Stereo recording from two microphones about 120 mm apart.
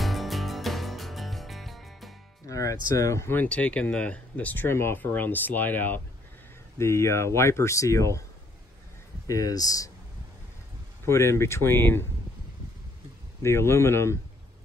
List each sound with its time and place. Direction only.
0.0 s music: centre (ahead or behind)
2.4 s speech: 25° left (ahead or behind)
9.3 s speech: 30° left (ahead or behind)
11.1 s speech: 20° left (ahead or behind)
13.4 s speech: 20° left (ahead or behind)